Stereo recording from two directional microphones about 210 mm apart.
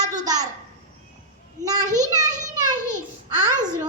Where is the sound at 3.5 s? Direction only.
10° left (ahead or behind).